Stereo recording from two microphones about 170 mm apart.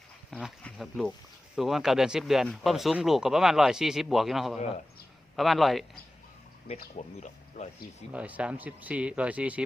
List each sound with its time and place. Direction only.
0.3 s speech: centre (ahead or behind)
6.9 s speech: 40° left (ahead or behind)
8.1 s speech: 5° right (ahead or behind)